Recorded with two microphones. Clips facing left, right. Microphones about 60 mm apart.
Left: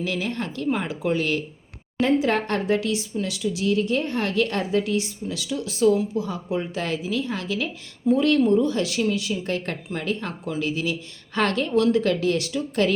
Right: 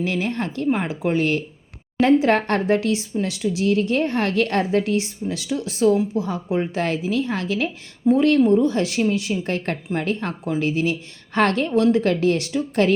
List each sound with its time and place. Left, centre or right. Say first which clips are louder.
0.0 s speech: right 3 dB; right
2.0 s speech: right 4 dB; right
8.0 s speech: right 3 dB; right
11.7 s speech: right 2 dB; right